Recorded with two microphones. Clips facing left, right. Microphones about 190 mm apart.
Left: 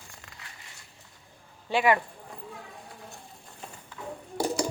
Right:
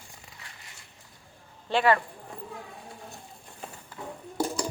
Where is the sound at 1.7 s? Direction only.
15° left (ahead or behind).